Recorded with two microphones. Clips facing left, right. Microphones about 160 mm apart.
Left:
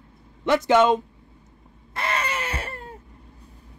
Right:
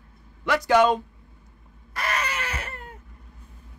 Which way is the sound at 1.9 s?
25° left (ahead or behind).